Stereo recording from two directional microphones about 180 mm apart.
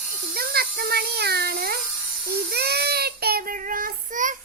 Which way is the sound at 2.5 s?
65° right (ahead or behind).